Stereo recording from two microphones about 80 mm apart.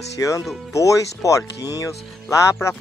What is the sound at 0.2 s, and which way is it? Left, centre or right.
Speech, left.